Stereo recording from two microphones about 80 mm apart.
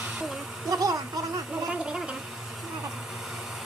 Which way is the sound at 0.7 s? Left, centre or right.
Right.